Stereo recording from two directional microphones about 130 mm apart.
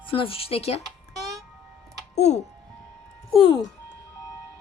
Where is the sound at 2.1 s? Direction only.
60° left (ahead or behind).